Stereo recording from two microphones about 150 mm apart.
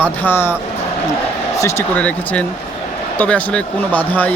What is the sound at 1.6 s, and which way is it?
Speech, 20° left (ahead or behind).